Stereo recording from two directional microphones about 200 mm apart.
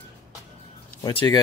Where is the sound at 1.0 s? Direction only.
20° left (ahead or behind).